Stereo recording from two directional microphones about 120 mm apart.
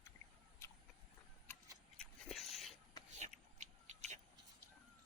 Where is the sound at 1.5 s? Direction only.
20° left (ahead or behind).